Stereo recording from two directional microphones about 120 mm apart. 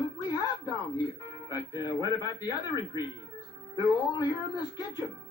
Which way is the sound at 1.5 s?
35° left (ahead or behind).